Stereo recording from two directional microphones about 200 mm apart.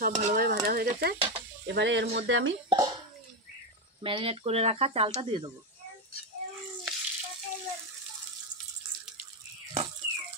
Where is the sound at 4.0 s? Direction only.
25° right (ahead or behind).